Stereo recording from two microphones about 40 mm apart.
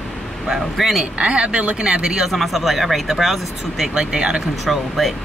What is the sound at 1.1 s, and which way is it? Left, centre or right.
Speech, right.